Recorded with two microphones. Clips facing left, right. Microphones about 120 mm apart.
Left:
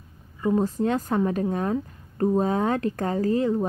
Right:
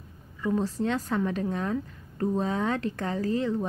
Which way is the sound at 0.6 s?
45° left (ahead or behind).